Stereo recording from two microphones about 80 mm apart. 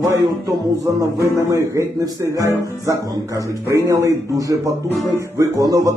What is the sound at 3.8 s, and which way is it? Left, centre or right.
Speech, right.